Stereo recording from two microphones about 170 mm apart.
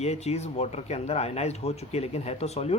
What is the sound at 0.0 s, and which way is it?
Speech, 40° left (ahead or behind).